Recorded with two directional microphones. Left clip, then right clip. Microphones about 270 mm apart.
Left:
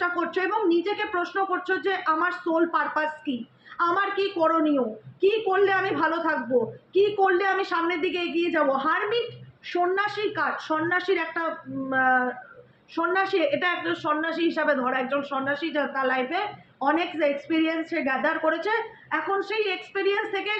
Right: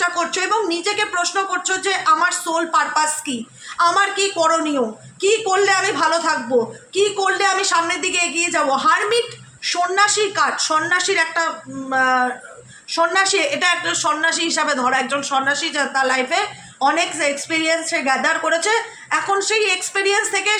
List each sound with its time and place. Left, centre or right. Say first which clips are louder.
0.0 s a woman's voice: right 6 dB; right